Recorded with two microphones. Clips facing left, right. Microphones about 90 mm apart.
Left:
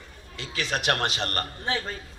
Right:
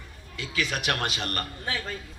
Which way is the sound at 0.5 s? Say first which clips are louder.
Left 2 dB; 35° left (ahead or behind).